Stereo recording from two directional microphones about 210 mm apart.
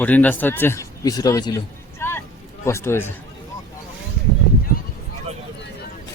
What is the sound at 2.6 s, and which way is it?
Speech, 10° left (ahead or behind).